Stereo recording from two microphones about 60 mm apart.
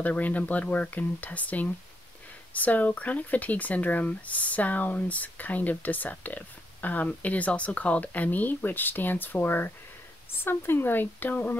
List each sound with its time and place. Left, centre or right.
0.0 s speech: left